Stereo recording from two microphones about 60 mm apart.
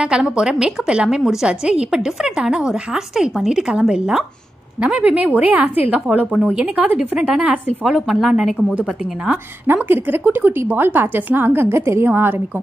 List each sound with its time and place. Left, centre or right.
0.0 s a woman's voice: centre
7.0 s a woman's voice: centre
7.8 s speech: centre
9.8 s a woman's voice: right
11.7 s a woman's voice: right